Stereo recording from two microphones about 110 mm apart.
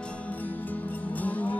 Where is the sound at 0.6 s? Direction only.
15° left (ahead or behind).